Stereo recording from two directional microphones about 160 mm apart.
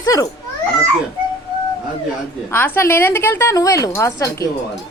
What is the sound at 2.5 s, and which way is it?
A woman's voice, 15° left (ahead or behind).